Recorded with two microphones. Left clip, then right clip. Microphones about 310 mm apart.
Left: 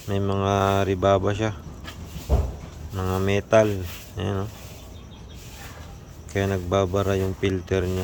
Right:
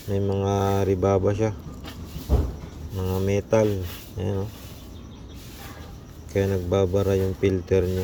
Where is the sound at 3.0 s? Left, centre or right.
Centre.